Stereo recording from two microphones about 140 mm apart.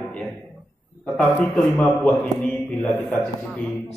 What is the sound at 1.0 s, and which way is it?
A man's voice, 10° left (ahead or behind).